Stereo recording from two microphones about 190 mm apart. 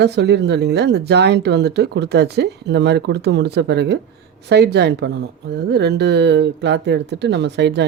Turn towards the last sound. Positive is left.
turn(degrees=-65)  # may be behind; listen again after turning